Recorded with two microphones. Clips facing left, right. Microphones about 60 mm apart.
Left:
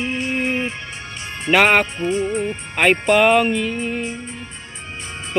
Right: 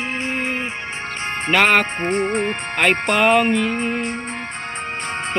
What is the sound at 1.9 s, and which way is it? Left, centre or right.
Music, right.